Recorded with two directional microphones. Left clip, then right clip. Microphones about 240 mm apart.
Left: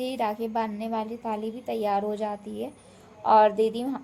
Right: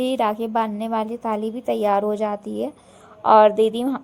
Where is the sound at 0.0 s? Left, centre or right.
Right.